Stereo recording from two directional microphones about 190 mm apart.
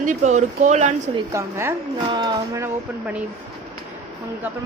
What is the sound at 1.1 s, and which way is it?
Speech, 15° right (ahead or behind).